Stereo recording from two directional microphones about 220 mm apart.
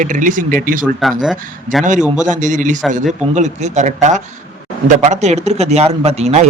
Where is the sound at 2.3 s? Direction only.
35° right (ahead or behind).